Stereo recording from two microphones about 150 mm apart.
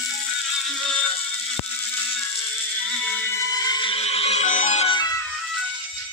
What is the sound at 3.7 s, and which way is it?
Music, 30° left (ahead or behind).